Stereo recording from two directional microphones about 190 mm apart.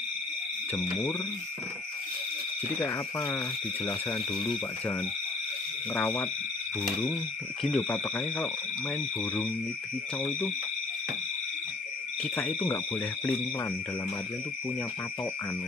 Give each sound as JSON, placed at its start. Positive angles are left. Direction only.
{"t": 2.8, "sound": "speech", "side_deg": 15}
{"t": 4.4, "sound": "speech", "side_deg": 25}
{"t": 5.9, "sound": "speech", "side_deg": 10}
{"t": 7.7, "sound": "speech", "side_deg": 10}
{"t": 12.2, "sound": "speech", "side_deg": 10}